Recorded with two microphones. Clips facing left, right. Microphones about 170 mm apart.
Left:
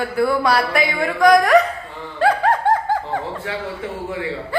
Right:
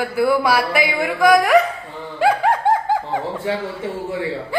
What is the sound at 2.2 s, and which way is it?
Music, 10° right (ahead or behind).